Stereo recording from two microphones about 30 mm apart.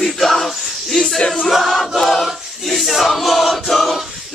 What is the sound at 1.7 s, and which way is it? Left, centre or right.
Choir, centre.